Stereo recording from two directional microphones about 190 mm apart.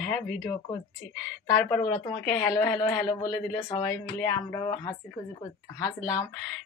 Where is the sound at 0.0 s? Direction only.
Centre (ahead or behind).